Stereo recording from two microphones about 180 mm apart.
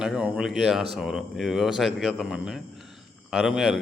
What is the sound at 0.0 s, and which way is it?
Speech, 5° right (ahead or behind).